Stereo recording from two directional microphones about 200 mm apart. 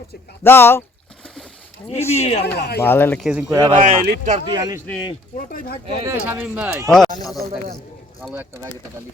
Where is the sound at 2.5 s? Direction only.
55° left (ahead or behind).